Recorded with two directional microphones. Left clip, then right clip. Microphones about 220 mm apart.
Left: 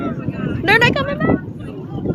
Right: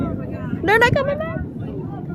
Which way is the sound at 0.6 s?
10° right (ahead or behind).